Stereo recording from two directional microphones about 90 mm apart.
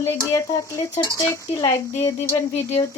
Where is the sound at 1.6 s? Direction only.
85° left.